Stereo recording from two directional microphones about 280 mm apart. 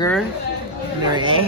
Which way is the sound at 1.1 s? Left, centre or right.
Centre.